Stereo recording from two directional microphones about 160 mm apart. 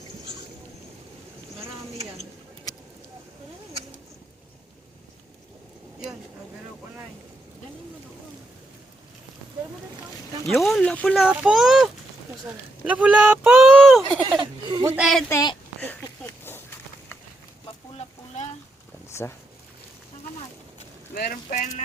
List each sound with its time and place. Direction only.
10.4 s speech: centre (ahead or behind)
11.2 s a child's voice: 5° right (ahead or behind)
13.7 s speech: centre (ahead or behind)
14.1 s speech: 30° right (ahead or behind)
14.9 s a child's voice: centre (ahead or behind)
15.3 s speech: 25° left (ahead or behind)
15.8 s a sound: 10° left (ahead or behind)
19.2 s speech: 15° left (ahead or behind)
21.1 s speech: 70° left (ahead or behind)
21.5 s speech: 50° left (ahead or behind)